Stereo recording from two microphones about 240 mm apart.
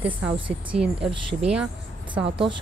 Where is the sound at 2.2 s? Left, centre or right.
Right.